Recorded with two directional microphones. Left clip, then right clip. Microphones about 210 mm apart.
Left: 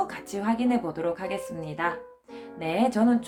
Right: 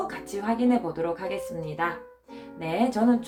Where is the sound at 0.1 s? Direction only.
50° left (ahead or behind).